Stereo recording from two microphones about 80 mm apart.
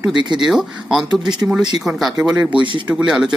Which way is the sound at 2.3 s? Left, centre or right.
Centre.